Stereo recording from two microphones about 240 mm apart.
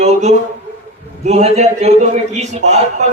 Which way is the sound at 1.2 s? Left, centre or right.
Right.